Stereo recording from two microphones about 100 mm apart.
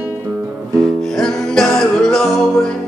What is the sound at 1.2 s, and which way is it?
Music, 5° left (ahead or behind).